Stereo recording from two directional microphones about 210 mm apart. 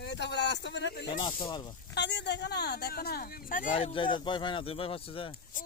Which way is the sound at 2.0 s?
55° left (ahead or behind).